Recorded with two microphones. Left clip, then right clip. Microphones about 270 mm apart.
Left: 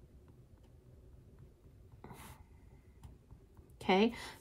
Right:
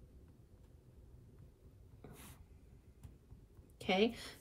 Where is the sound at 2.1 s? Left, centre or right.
Centre.